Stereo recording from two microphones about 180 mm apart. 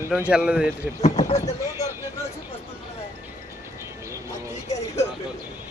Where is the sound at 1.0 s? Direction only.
40° left (ahead or behind).